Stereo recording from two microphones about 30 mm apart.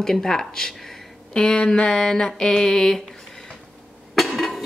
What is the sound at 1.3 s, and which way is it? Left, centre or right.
Speech, left.